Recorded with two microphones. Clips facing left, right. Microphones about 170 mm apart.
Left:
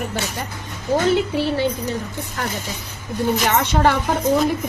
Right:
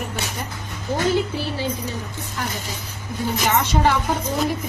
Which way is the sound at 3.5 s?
60° left (ahead or behind).